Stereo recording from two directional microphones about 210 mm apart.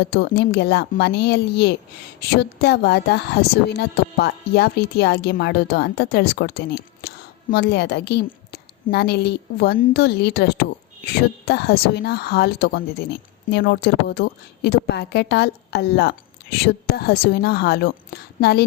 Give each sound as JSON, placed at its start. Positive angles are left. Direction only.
{"t": 0.0, "sound": "a woman's voice", "side_deg": 50}